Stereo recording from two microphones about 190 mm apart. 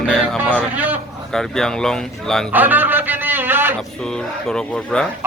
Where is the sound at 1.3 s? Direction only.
Centre (ahead or behind).